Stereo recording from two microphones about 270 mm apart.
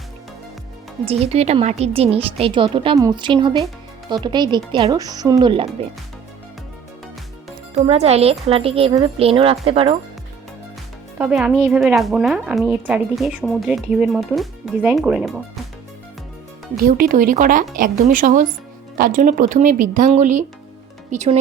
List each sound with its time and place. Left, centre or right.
1.0 s a woman's voice: right
7.8 s a woman's voice: right
11.2 s a woman's voice: centre
16.8 s a woman's voice: right